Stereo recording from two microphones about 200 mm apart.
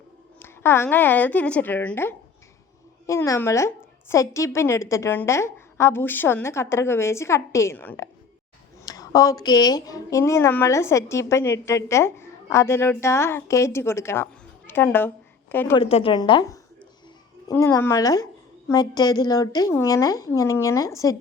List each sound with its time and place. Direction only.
0.3 s a woman's voice: 10° left (ahead or behind)
15.7 s a woman's voice: 30° left (ahead or behind)